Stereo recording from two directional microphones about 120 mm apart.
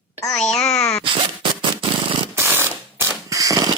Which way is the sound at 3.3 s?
30° right (ahead or behind).